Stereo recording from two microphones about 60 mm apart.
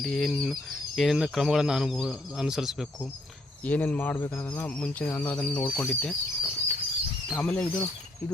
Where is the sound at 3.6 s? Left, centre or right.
Left.